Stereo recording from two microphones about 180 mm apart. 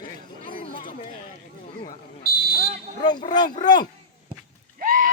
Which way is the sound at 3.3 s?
25° left (ahead or behind).